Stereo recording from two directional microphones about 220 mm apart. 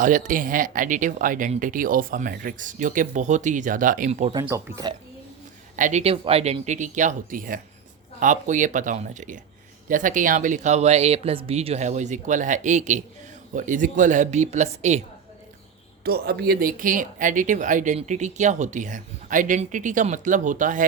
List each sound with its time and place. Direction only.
0.0 s speech: 35° right (ahead or behind)
4.4 s speech: 15° right (ahead or behind)
5.7 s speech: 35° right (ahead or behind)
16.0 s speech: 45° right (ahead or behind)